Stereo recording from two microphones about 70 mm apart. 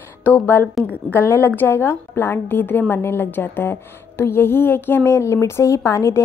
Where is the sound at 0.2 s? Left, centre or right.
Left.